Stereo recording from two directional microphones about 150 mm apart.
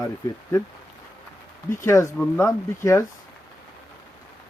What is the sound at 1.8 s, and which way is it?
Speech, 20° left (ahead or behind).